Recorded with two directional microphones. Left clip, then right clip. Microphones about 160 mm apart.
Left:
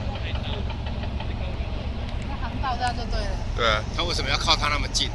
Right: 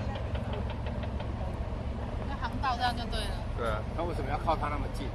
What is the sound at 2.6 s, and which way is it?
Speech, 25° left (ahead or behind).